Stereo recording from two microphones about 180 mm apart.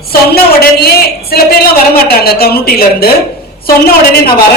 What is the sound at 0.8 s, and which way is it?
A woman's voice, 60° left (ahead or behind).